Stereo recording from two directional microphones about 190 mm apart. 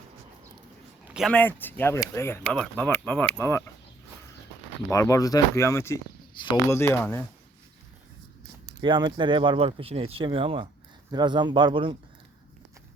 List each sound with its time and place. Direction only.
1.0 s a sound: 5° right (ahead or behind)
1.3 s speech: 10° left (ahead or behind)
4.9 s speech: 15° left (ahead or behind)
6.3 s speech: 25° left (ahead or behind)
6.7 s speech: 15° left (ahead or behind)
8.8 s speech: 25° right (ahead or behind)